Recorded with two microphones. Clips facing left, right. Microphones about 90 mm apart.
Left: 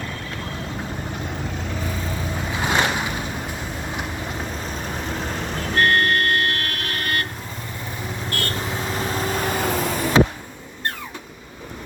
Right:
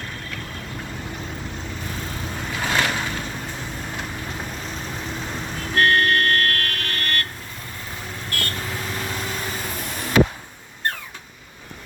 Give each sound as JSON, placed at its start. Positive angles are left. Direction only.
{"t": 2.5, "sound": "boat", "side_deg": 20}
{"t": 5.7, "sound": "vehicle", "side_deg": 0}
{"t": 8.3, "sound": "vehicle", "side_deg": 30}
{"t": 9.6, "sound": "vehicle", "side_deg": 85}